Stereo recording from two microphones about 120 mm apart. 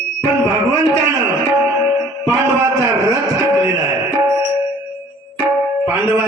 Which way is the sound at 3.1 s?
25° right (ahead or behind).